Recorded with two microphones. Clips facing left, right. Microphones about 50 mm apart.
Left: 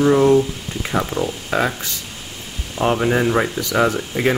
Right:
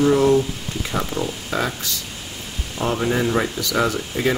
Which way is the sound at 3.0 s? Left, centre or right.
Left.